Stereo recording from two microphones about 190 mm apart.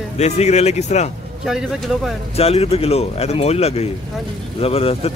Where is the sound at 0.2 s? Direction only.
35° left (ahead or behind).